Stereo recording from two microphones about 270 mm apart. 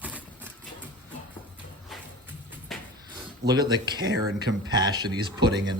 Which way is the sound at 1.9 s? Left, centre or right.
Centre.